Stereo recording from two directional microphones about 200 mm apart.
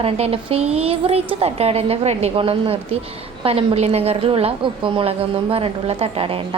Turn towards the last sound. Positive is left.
turn(degrees=-30)  # may be behind; listen again after turning